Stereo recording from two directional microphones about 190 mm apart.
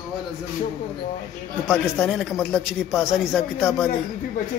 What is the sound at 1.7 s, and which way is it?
Speech, centre (ahead or behind).